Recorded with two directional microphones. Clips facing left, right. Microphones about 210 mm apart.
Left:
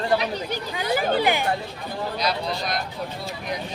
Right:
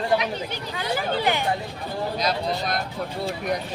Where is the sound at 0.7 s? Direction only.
15° left (ahead or behind).